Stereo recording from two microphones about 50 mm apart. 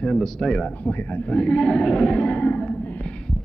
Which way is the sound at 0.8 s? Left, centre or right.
Left.